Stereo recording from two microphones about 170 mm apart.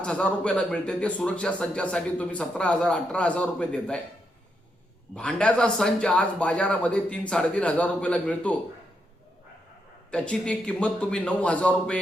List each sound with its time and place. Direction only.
0.0 s speech: 5° left (ahead or behind)
5.1 s speech: 5° left (ahead or behind)
10.1 s speech: 5° left (ahead or behind)